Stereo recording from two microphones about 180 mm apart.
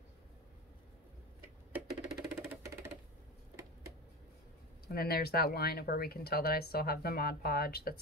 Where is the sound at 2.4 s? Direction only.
15° right (ahead or behind).